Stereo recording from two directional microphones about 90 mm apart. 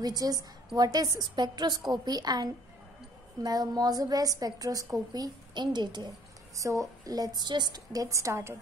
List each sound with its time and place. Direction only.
0.0 s a woman's voice: 45° right (ahead or behind)
6.5 s a woman's voice: 35° right (ahead or behind)